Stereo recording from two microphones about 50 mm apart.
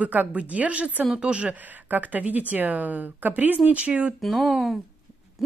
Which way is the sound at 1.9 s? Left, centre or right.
Right.